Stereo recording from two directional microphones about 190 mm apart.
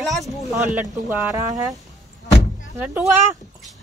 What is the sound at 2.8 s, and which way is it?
Speech, 10° right (ahead or behind).